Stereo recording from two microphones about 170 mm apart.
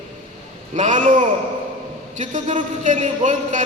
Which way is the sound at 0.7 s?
45° right (ahead or behind).